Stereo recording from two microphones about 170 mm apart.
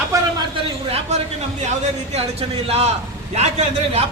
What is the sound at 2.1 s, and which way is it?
A man's voice, 35° right (ahead or behind).